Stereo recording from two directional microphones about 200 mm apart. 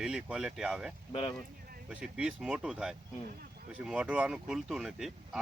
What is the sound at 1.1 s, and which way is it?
Speech, 25° left (ahead or behind).